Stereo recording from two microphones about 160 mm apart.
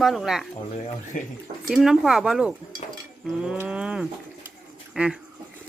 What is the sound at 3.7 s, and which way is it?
Speech, 5° right (ahead or behind).